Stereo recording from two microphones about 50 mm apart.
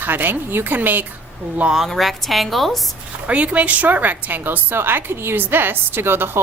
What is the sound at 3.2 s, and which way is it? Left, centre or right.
A woman's voice, right.